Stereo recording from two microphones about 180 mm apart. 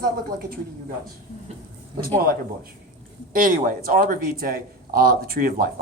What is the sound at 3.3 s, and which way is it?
A man's voice, 50° right (ahead or behind).